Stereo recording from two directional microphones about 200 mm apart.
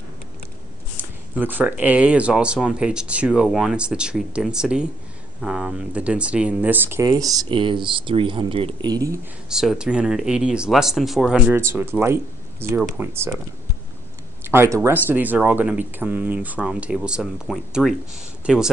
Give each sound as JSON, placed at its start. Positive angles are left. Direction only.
{"t": 1.0, "sound": "a sound", "side_deg": -10}
{"t": 1.4, "sound": "speech", "side_deg": -10}
{"t": 9.5, "sound": "speech", "side_deg": -5}
{"t": 14.4, "sound": "speech", "side_deg": -10}